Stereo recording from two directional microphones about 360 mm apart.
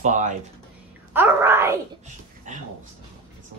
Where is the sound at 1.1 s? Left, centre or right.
Centre.